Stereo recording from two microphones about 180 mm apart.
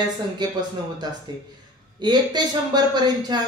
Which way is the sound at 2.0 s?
25° right (ahead or behind).